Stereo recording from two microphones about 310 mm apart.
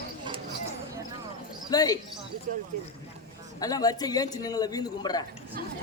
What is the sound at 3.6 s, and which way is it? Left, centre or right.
A man's voice, centre.